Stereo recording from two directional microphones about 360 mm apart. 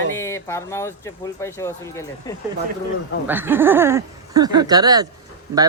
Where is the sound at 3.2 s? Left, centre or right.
Centre.